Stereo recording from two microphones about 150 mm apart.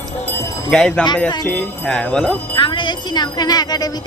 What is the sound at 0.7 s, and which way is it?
Speech, 5° left (ahead or behind).